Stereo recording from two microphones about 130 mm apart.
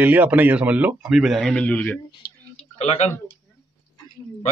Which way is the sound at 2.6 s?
55° left (ahead or behind).